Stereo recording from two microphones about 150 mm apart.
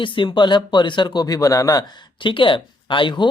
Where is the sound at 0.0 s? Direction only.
35° left (ahead or behind).